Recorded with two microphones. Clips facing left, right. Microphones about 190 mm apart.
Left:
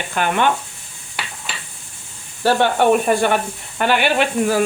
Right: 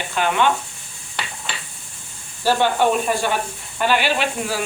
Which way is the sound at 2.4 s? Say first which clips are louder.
Left 2 dB; 60° left (ahead or behind).